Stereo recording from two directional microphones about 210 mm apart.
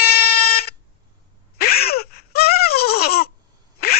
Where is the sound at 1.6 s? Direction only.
45° left (ahead or behind).